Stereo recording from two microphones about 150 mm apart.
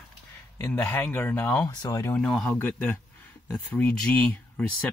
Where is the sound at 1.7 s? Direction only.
25° left (ahead or behind).